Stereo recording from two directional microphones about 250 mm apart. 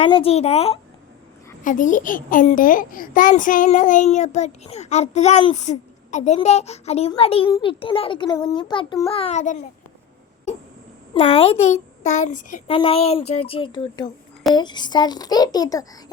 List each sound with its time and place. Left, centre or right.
0.0 s a child's voice: left
11.1 s a child's voice: left